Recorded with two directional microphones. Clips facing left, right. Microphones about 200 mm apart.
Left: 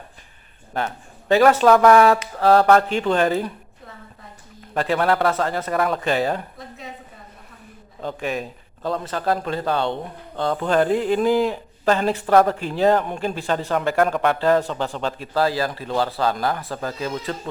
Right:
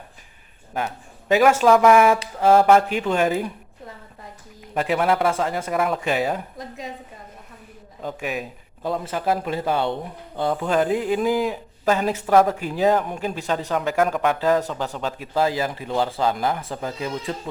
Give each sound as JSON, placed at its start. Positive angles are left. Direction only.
{"t": 1.3, "sound": "speech", "side_deg": -10}
{"t": 2.4, "sound": "a man's voice", "side_deg": -15}
{"t": 4.7, "sound": "a man's voice", "side_deg": -10}
{"t": 8.0, "sound": "a man's voice", "side_deg": -5}